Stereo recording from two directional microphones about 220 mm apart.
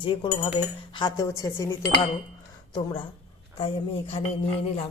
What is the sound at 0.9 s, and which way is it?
Dishes, 20° left (ahead or behind).